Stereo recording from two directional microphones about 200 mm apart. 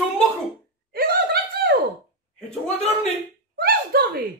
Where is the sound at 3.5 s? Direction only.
50° right (ahead or behind).